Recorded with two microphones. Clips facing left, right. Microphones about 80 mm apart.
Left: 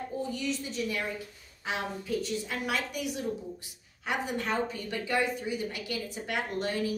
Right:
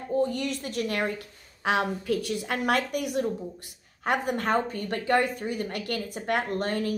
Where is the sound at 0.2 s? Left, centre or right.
Right.